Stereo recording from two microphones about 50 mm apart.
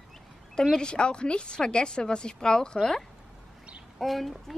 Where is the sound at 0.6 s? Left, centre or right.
Centre.